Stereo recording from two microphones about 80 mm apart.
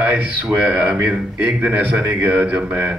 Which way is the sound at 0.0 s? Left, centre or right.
Centre.